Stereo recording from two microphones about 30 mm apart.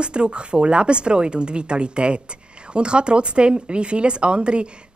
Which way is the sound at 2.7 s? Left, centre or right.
Right.